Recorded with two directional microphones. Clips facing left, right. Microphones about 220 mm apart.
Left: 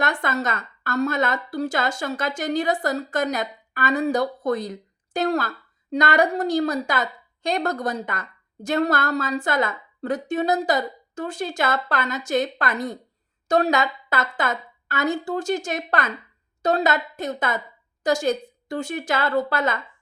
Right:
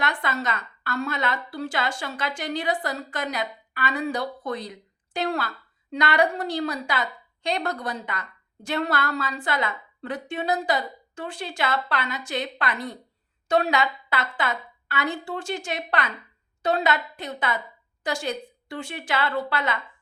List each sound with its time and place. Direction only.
0.0 s a woman's voice: 45° left (ahead or behind)